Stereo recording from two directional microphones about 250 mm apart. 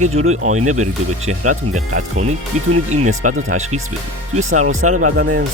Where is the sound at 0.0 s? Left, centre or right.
Right.